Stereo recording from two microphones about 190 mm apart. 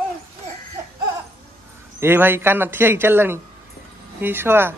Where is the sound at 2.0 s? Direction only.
10° right (ahead or behind).